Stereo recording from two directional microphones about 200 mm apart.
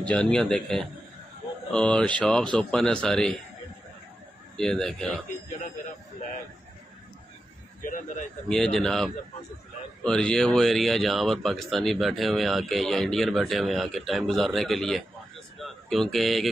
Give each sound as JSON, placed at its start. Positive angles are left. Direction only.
{"t": 0.0, "sound": "speech", "side_deg": 5}
{"t": 4.6, "sound": "speech", "side_deg": 5}
{"t": 7.8, "sound": "a man's voice", "side_deg": 40}
{"t": 8.5, "sound": "a man's voice", "side_deg": 5}